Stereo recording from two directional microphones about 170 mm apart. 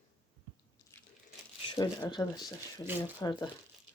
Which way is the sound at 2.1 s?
25° left (ahead or behind).